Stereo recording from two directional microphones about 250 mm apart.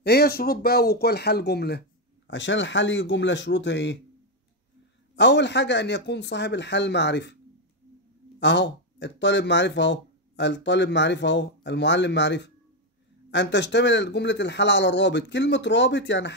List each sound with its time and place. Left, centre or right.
0.0 s speech: left
5.1 s speech: left
8.4 s speech: left